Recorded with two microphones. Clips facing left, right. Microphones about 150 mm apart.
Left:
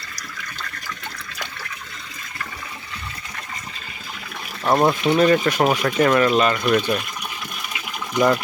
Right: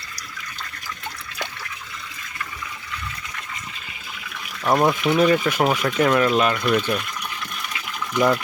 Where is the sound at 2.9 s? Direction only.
40° left (ahead or behind).